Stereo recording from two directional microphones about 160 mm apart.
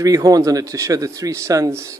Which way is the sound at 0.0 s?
20° right (ahead or behind).